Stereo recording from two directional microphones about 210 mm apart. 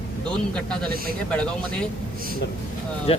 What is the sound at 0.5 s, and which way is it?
Speech, 5° left (ahead or behind).